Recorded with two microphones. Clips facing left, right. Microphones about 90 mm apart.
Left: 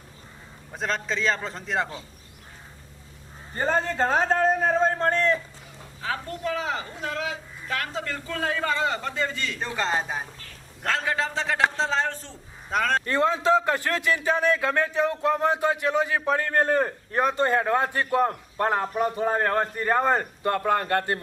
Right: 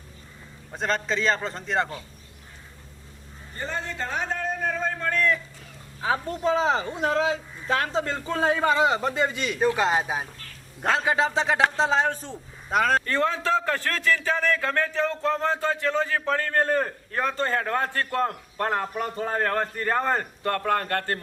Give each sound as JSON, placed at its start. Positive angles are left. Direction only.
{"t": 0.7, "sound": "a man's voice", "side_deg": 0}
{"t": 3.5, "sound": "a man's voice", "side_deg": 40}
{"t": 6.0, "sound": "a man's voice", "side_deg": -20}
{"t": 12.7, "sound": "a man's voice", "side_deg": -5}
{"t": 13.1, "sound": "a man's voice", "side_deg": 20}